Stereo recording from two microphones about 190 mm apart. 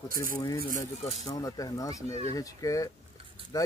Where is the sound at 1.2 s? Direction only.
20° left (ahead or behind).